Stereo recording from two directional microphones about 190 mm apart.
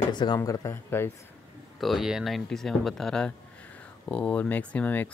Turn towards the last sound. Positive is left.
turn(degrees=10)  # may be behind; listen again after turning